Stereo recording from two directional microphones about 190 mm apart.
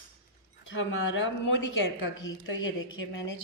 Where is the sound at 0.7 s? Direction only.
85° left.